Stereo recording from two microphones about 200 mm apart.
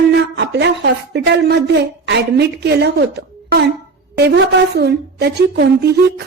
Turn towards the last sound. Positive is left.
turn(degrees=-55)  # may be behind; listen again after turning